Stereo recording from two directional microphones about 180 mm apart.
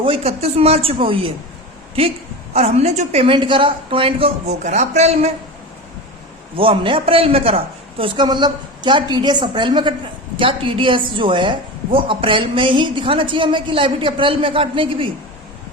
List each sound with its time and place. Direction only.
0.0 s a woman's voice: 30° right (ahead or behind)
2.5 s a woman's voice: 35° right (ahead or behind)
6.6 s a woman's voice: 30° right (ahead or behind)